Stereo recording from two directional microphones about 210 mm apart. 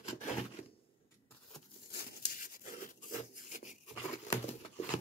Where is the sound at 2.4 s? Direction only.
40° left (ahead or behind).